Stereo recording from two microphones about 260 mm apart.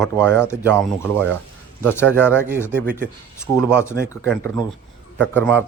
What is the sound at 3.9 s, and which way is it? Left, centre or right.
Speech, centre.